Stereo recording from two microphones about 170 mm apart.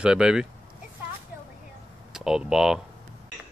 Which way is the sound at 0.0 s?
5° right (ahead or behind).